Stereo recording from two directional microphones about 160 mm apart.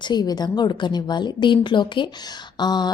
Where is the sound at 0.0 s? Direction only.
25° left (ahead or behind).